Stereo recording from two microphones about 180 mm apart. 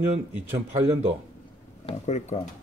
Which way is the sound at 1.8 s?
40° left (ahead or behind).